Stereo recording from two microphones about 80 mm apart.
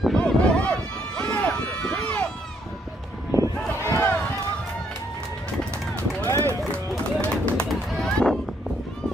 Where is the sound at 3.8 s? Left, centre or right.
Left.